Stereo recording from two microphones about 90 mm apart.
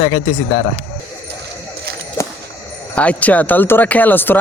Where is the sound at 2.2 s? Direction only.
35° left (ahead or behind).